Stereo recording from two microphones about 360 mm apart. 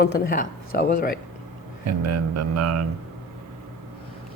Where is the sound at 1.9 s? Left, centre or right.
Right.